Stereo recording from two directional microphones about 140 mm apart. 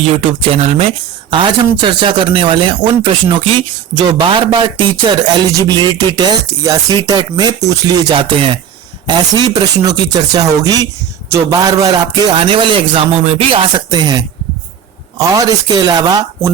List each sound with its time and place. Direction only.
0.3 s speech: 45° right (ahead or behind); by 16.5 s 30° right (ahead or behind)